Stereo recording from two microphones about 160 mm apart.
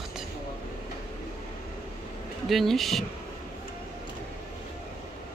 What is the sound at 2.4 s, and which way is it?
Speech, centre (ahead or behind).